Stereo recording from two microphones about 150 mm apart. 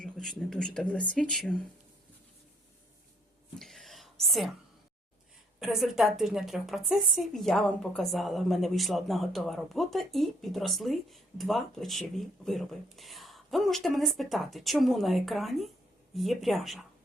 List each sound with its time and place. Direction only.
0.0 s a woman's voice: 5° left (ahead or behind)
3.6 s whispering: centre (ahead or behind)
5.5 s a woman's voice: 5° right (ahead or behind)